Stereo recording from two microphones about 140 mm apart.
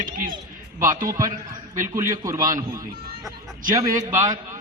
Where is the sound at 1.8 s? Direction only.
20° right (ahead or behind).